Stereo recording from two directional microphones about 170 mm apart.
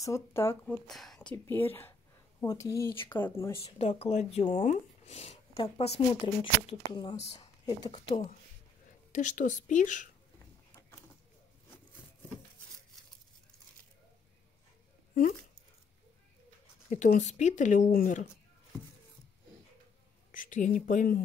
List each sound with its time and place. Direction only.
0.0 s speech: 15° left (ahead or behind)
0.8 s speech: centre (ahead or behind)
1.3 s speech: 15° left (ahead or behind)
3.6 s speech: 35° left (ahead or behind)
9.1 s speech: 50° left (ahead or behind)
16.9 s speech: 45° left (ahead or behind)
20.2 s speech: 50° left (ahead or behind)